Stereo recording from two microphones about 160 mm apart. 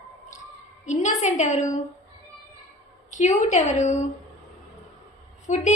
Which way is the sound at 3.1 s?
50° left (ahead or behind).